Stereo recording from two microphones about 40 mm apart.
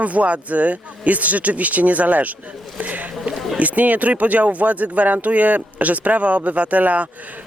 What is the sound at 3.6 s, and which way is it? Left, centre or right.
A man's voice, right.